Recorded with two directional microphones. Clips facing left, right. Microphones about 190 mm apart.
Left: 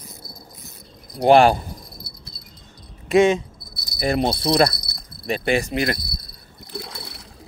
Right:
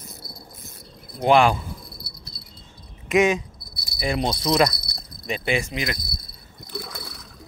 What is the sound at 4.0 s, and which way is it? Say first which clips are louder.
Speech: left 4 dB; 50° left (ahead or behind).